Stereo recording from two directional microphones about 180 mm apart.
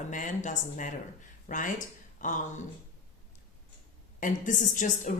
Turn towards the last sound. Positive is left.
turn(degrees=45)  # may be behind; listen again after turning